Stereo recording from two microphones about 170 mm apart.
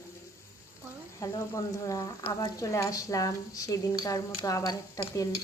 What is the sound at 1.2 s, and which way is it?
Speech, 20° left (ahead or behind).